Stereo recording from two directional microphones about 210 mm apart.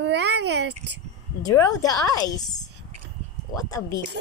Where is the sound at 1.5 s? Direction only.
15° left (ahead or behind).